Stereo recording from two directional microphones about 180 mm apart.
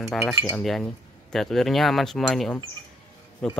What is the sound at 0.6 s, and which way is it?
Speech, centre (ahead or behind).